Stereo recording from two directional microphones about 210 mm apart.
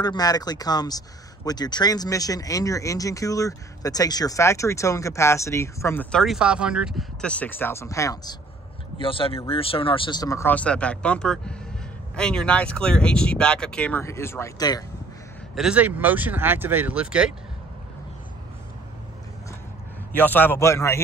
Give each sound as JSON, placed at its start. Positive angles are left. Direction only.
{"t": 0.0, "sound": "speech", "side_deg": 20}
{"t": 15.5, "sound": "speech", "side_deg": -5}
{"t": 20.2, "sound": "speech", "side_deg": 10}